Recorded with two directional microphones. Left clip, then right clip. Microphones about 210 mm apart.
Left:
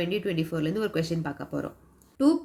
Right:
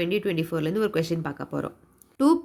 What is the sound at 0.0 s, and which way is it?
Speech, 30° right (ahead or behind).